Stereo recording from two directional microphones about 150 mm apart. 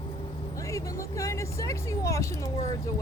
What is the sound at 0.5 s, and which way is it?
Speech, 20° left (ahead or behind).